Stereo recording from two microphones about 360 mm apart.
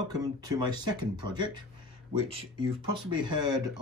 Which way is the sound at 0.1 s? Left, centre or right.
Centre.